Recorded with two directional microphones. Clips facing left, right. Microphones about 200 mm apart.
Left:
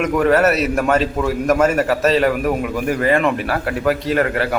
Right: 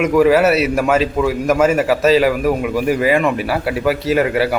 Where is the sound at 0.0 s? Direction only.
5° right (ahead or behind).